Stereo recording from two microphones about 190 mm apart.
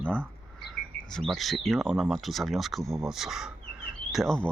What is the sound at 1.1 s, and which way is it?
Speech, centre (ahead or behind).